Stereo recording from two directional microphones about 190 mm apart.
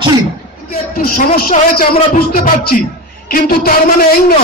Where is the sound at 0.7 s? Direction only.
50° left (ahead or behind).